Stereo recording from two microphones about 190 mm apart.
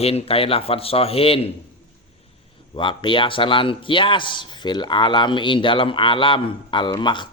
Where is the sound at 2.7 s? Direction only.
25° left (ahead or behind).